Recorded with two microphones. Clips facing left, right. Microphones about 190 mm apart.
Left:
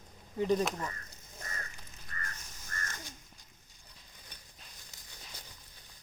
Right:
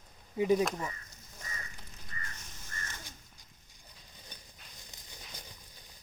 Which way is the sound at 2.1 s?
50° left (ahead or behind).